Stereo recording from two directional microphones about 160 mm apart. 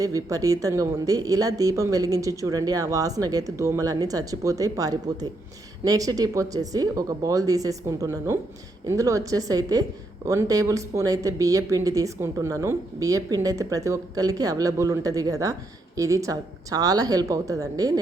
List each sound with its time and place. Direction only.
0.0 s speech: 20° right (ahead or behind)